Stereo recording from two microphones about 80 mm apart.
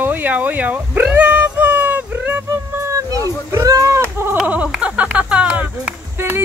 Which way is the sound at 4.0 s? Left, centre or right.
Right.